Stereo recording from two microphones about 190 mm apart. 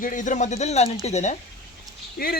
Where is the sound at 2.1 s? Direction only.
55° left (ahead or behind).